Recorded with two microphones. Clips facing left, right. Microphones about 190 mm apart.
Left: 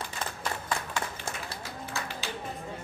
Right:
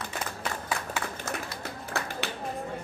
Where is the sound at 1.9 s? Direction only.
60° right (ahead or behind).